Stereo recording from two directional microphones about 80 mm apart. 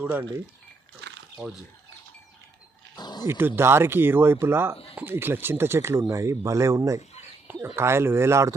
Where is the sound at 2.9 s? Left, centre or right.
Left.